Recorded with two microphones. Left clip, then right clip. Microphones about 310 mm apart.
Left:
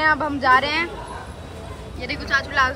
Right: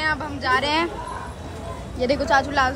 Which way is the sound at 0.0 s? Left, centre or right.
Centre.